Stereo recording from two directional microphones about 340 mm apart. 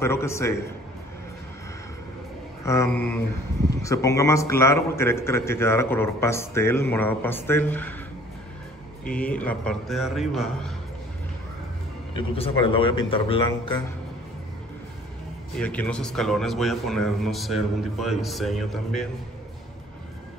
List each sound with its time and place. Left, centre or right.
0.0 s a man's voice: centre
2.6 s a man's voice: centre
9.0 s a man's voice: centre
12.2 s a man's voice: centre
15.6 s a man's voice: centre